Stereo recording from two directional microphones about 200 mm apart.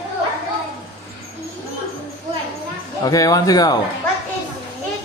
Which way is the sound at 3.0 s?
20° left (ahead or behind).